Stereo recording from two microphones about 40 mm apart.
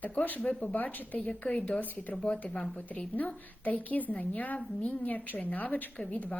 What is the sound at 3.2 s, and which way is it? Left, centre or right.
A woman's voice, left.